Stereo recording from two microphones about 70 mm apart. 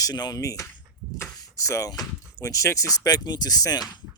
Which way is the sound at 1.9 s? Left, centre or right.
Left.